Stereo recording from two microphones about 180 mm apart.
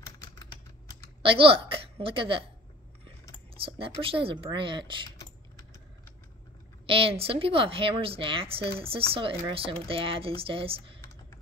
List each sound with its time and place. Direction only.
0.2 s typing: 20° left (ahead or behind)
1.2 s a woman's voice: 30° right (ahead or behind)
3.6 s a woman's voice: 30° right (ahead or behind)
5.1 s typing: 15° left (ahead or behind)
6.9 s speech: 30° right (ahead or behind)